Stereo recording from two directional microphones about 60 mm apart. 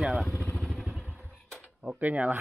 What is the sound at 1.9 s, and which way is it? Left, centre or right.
Speech, right.